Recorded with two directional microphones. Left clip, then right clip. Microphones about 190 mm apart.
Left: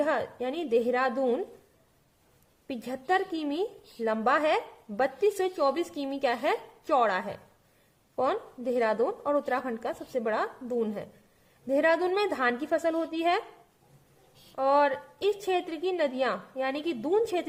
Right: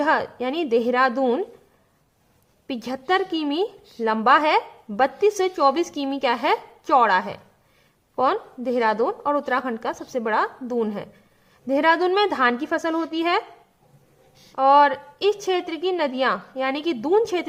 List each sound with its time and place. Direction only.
0.0 s a woman's voice: 25° right (ahead or behind)
2.6 s a woman's voice: 20° right (ahead or behind)
14.5 s a woman's voice: 20° right (ahead or behind)